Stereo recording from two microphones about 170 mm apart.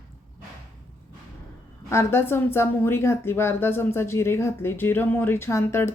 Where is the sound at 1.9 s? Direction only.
15° left (ahead or behind).